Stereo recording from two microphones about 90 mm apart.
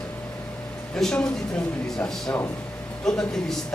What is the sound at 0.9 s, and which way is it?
Speech, 5° left (ahead or behind).